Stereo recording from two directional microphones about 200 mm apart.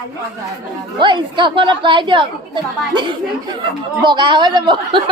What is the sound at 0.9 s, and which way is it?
Speech, 25° right (ahead or behind).